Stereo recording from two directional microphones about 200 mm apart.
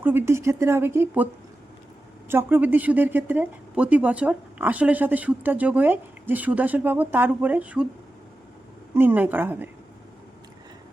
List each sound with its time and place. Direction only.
0.0 s speech: 10° right (ahead or behind)
2.3 s speech: 10° right (ahead or behind)
9.0 s speech: 10° right (ahead or behind)